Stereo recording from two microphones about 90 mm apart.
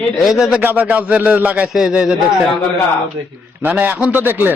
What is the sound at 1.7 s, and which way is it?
Speech, 5° right (ahead or behind).